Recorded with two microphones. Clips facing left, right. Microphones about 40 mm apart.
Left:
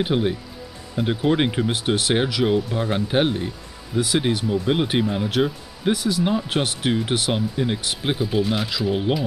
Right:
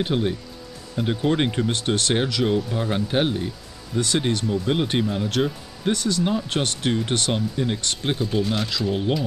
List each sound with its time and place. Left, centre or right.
0.0 s speech: centre